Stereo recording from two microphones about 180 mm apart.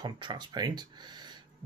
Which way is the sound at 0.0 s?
25° right (ahead or behind).